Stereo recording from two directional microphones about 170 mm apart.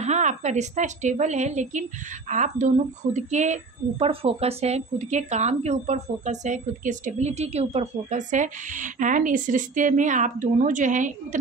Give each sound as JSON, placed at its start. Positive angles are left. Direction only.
{"t": 0.0, "sound": "a woman's voice", "side_deg": -45}